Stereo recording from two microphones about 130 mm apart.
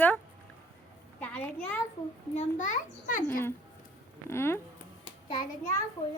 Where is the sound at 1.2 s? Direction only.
10° left (ahead or behind).